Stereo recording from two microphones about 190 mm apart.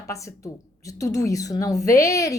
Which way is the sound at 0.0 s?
15° left (ahead or behind).